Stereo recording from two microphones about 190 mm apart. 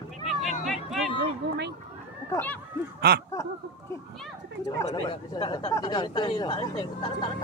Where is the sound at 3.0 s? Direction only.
55° right (ahead or behind).